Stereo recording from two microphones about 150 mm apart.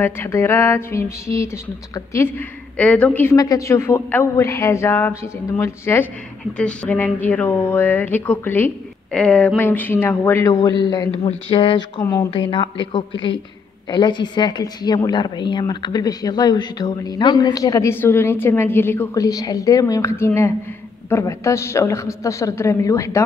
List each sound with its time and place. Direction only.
0.0 s speech: 15° left (ahead or behind)
3.3 s a woman's voice: 20° left (ahead or behind)
6.5 s a woman's voice: 5° left (ahead or behind)